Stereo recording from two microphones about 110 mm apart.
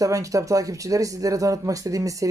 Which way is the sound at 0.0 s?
30° right (ahead or behind).